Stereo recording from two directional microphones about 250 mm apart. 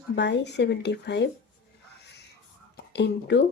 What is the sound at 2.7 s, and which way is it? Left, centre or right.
Speech, left.